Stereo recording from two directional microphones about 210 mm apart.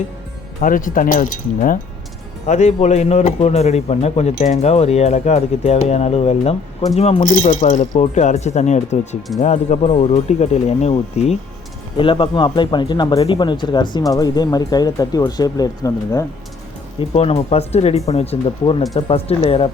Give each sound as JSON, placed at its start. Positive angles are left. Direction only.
{"t": 0.6, "sound": "speech", "side_deg": 40}
{"t": 17.0, "sound": "speech", "side_deg": 30}